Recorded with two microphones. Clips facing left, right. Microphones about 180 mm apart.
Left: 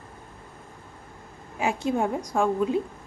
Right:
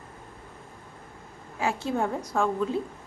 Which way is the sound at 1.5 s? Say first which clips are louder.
Left 2 dB; 15° left (ahead or behind).